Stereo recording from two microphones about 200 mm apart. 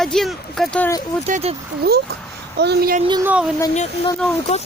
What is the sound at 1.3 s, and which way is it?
Speech, 30° right (ahead or behind).